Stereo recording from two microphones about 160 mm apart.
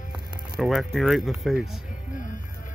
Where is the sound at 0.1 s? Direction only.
Centre (ahead or behind).